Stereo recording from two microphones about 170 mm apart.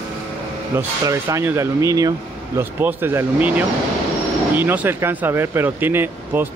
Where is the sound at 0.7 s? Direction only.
15° right (ahead or behind).